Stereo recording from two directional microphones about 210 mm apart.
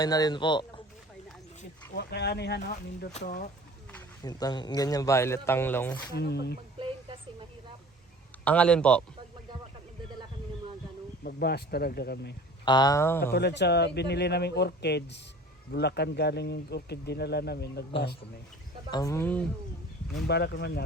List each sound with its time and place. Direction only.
0.0 s speech: 20° left (ahead or behind)
2.0 s speech: 50° left (ahead or behind)
3.1 s speech: 30° left (ahead or behind)
4.2 s speech: 20° left (ahead or behind)
6.1 s speech: 50° left (ahead or behind)
6.7 s a sound: 25° right (ahead or behind)
8.4 s a man's voice: 5° left (ahead or behind)
11.2 s speech: 45° left (ahead or behind)
12.6 s speech: 20° left (ahead or behind)
13.3 s speech: 55° left (ahead or behind)
18.9 s speech: 20° left (ahead or behind)
20.2 s speech: 50° left (ahead or behind)